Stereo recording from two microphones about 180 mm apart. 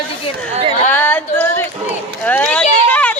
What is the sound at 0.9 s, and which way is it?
Female singing, 10° left (ahead or behind).